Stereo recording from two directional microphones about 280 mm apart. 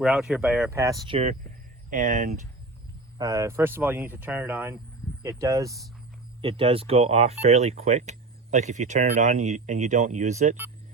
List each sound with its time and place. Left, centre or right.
0.0 s speech: centre; by 2.3 s right
3.2 s speech: centre